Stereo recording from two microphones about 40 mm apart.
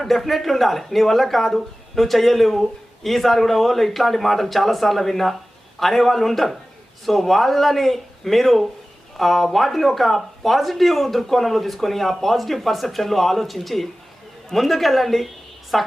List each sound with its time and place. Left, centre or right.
0.0 s speech: centre